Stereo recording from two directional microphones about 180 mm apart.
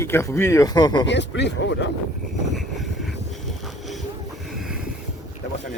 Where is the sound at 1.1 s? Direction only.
75° left (ahead or behind).